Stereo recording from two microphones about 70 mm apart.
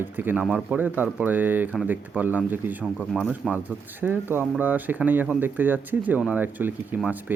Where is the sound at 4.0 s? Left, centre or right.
Right.